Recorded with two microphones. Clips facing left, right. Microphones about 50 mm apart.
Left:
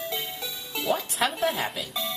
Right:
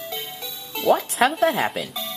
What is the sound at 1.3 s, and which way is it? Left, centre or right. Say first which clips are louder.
Speech: right 6 dB; right.